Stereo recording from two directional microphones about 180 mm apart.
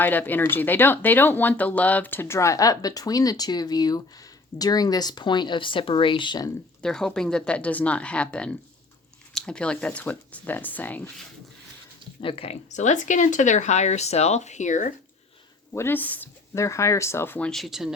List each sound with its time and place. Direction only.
0.0 s speech: 10° left (ahead or behind)
6.8 s speech: 5° left (ahead or behind)
12.2 s speech: 30° left (ahead or behind); by 14.9 s 45° left (ahead or behind)
15.7 s speech: 10° left (ahead or behind)